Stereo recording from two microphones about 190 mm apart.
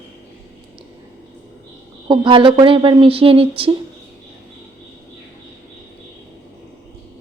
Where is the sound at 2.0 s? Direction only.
25° right (ahead or behind).